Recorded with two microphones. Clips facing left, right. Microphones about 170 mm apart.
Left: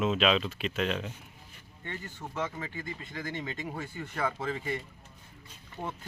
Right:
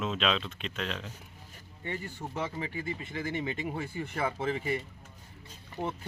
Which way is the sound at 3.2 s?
15° right (ahead or behind).